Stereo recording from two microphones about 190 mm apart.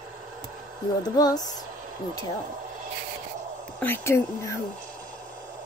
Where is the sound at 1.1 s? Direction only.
20° left (ahead or behind).